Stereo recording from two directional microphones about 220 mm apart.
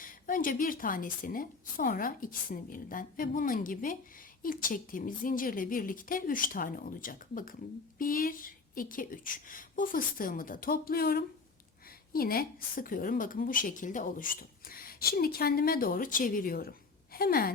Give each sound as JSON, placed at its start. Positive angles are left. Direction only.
{"t": 0.0, "sound": "a woman's voice", "side_deg": 40}